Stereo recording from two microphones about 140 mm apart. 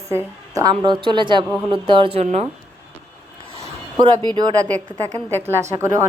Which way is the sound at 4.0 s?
30° right (ahead or behind).